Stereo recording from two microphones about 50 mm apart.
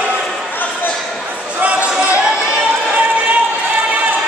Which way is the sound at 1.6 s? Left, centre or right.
Right.